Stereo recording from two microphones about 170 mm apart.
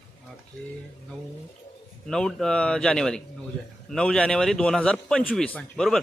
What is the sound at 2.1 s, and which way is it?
A man's voice, 5° left (ahead or behind).